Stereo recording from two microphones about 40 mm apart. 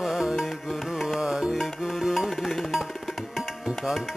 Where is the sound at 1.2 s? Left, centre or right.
Centre.